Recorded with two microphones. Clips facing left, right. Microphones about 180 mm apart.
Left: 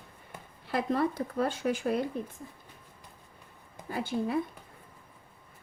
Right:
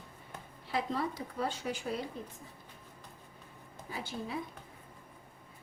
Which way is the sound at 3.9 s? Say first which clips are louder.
Left 9 dB; 55° left (ahead or behind).